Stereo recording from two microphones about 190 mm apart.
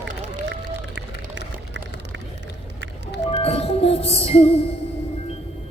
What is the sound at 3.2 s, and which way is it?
Music, 30° left (ahead or behind).